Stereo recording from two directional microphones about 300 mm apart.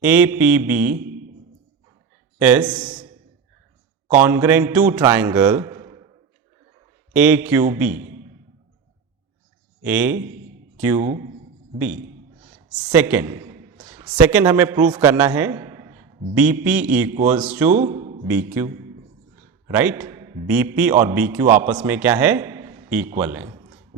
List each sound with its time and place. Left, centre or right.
0.0 s a man's voice: centre
2.4 s a man's voice: centre
2.9 s a sound: centre
4.2 s a man's voice: centre
7.2 s a man's voice: centre
9.8 s a man's voice: centre
12.8 s a sound: centre
14.2 s a man's voice: centre
17.9 s a sound: right
18.3 s a man's voice: centre
19.6 s a sound: centre
20.5 s a man's voice: centre